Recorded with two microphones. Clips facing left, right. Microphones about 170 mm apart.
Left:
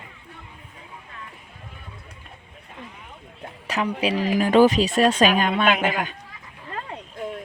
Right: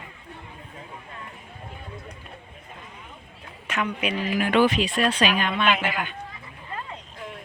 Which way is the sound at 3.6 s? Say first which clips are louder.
Left 3 dB; 35° left (ahead or behind).